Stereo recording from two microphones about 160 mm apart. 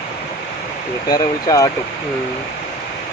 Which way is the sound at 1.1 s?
25° left (ahead or behind).